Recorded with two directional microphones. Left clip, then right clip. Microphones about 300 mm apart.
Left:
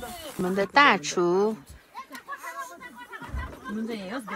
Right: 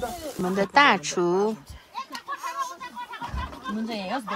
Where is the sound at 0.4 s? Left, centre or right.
Centre.